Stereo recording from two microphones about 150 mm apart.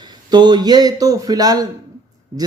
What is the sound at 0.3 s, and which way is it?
A man's voice, 30° right (ahead or behind).